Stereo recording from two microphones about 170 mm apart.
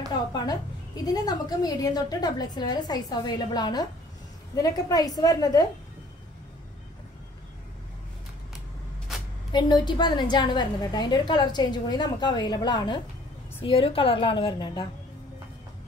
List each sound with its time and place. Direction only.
1.0 s a woman's voice: 20° left (ahead or behind)
9.5 s a woman's voice: 25° left (ahead or behind)